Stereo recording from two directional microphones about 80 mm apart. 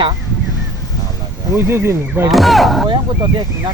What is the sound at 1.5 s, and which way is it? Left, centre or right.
Speech, right.